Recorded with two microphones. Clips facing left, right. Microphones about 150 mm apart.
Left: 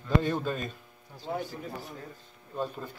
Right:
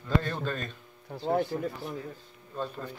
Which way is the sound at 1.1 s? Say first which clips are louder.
Right 7 dB; 60° right (ahead or behind).